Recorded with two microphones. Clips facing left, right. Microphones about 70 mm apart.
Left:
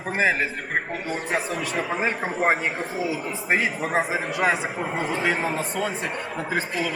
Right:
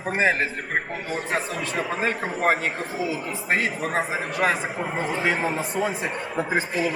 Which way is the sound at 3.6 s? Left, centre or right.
Centre.